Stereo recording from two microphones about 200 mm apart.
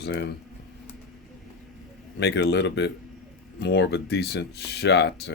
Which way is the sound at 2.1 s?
60° left (ahead or behind).